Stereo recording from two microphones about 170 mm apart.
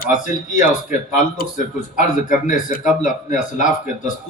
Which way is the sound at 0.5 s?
50° left (ahead or behind).